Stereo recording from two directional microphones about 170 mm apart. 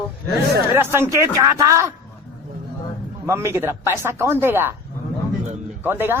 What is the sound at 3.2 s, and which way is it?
Speech, 15° right (ahead or behind).